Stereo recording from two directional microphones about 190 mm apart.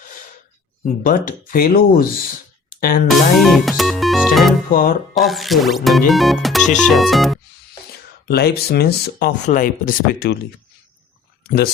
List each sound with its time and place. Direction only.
1.0 s speech: 45° left (ahead or behind)
3.1 s music: centre (ahead or behind)
4.7 s speech: 50° left (ahead or behind)
5.1 s speech: centre (ahead or behind)
8.3 s speech: 55° left (ahead or behind)